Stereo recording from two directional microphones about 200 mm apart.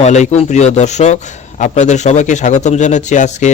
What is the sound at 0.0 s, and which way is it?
A man's voice, 35° left (ahead or behind).